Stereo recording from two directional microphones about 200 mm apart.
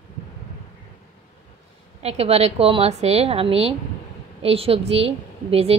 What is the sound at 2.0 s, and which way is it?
A woman's voice, 30° right (ahead or behind).